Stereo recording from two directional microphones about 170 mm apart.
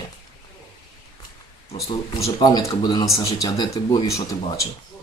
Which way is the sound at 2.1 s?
20° left (ahead or behind).